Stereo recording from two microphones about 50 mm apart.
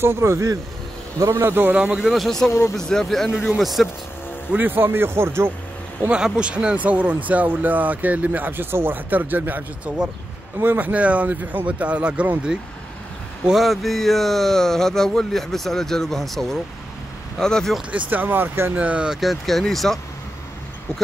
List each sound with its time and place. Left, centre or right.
0.0 s speech: right
1.4 s speech: right
1.7 s speech: right
2.0 s speech: centre
3.4 s speech: centre
4.6 s speech: right
4.9 s speech: right
6.0 s speech: centre; by 9.7 s right
9.9 s speech: right
13.5 s speech: centre
17.9 s speech: right
18.8 s speech: right
19.1 s speech: centre